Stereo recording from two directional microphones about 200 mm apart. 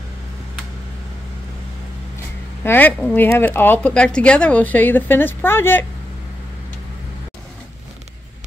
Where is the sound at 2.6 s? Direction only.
10° left (ahead or behind).